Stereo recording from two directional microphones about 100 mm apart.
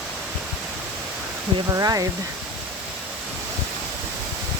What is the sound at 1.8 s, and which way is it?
Speech, 35° right (ahead or behind).